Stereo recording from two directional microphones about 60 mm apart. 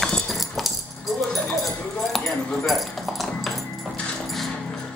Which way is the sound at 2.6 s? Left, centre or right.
Centre.